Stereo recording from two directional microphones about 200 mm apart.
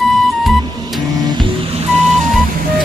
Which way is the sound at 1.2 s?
25° right (ahead or behind).